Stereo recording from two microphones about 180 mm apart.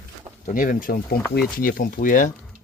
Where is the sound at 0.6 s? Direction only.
50° left (ahead or behind).